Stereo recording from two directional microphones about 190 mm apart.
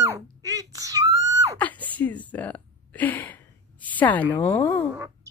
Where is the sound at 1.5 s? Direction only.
10° left (ahead or behind).